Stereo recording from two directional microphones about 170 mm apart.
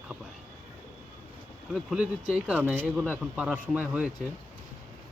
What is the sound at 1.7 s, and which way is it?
Speech, 5° right (ahead or behind).